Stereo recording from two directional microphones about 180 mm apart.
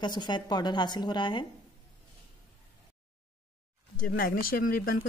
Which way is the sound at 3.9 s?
50° left (ahead or behind).